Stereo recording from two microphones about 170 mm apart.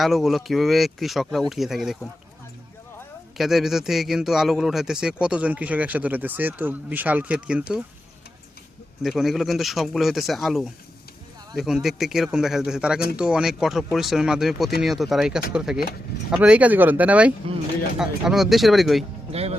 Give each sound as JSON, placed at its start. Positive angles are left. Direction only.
{"t": 0.0, "sound": "a man's voice", "side_deg": 0}
{"t": 3.3, "sound": "a man's voice", "side_deg": 0}
{"t": 9.0, "sound": "a man's voice", "side_deg": 0}
{"t": 19.3, "sound": "speech", "side_deg": -35}